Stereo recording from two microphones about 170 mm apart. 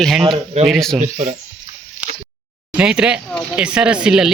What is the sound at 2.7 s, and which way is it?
Speech, 5° right (ahead or behind).